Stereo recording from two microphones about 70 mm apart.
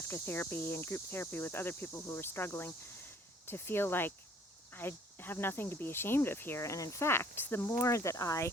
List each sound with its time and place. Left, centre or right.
0.1 s speech: left
6.6 s speech: left